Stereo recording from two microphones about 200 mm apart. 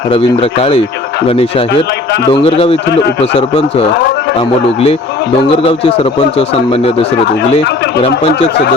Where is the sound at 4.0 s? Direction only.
55° left (ahead or behind).